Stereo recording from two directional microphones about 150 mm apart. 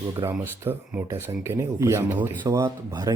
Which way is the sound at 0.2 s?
20° right (ahead or behind).